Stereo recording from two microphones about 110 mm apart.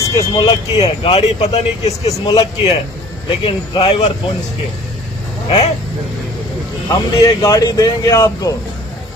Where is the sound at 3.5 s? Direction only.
55° left (ahead or behind).